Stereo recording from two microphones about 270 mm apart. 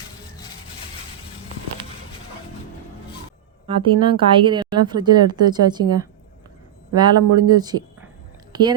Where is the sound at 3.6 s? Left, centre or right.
Centre.